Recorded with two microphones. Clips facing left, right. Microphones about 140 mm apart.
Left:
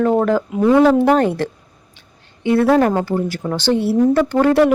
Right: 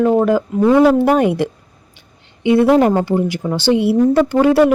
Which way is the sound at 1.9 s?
15° right (ahead or behind).